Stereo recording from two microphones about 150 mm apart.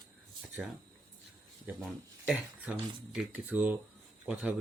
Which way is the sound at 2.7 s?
10° right (ahead or behind).